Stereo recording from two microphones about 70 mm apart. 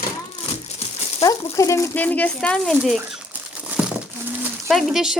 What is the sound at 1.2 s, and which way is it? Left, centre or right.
Speech, left.